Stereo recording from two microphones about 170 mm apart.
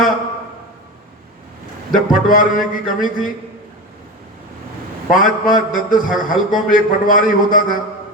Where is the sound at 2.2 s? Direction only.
50° left (ahead or behind).